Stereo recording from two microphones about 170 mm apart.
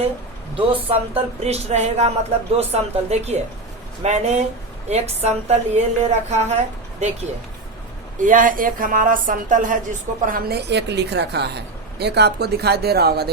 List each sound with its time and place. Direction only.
0.5 s a woman's voice: 35° right (ahead or behind)
8.2 s speech: 50° right (ahead or behind); by 13.3 s 70° right (ahead or behind)